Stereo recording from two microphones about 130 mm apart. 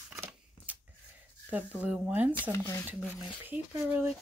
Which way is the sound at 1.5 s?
10° right (ahead or behind).